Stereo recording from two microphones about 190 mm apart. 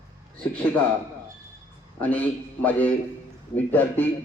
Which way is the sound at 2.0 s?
10° left (ahead or behind).